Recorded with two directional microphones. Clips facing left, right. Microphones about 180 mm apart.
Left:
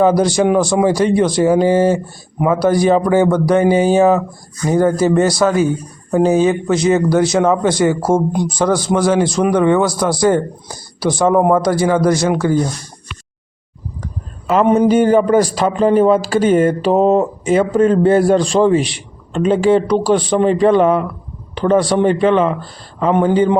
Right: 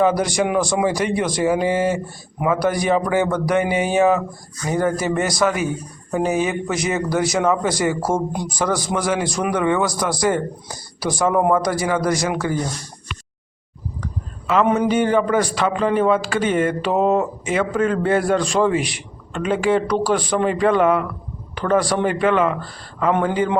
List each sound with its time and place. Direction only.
0.0 s a man's voice: 30° left (ahead or behind)
14.4 s a man's voice: 35° left (ahead or behind)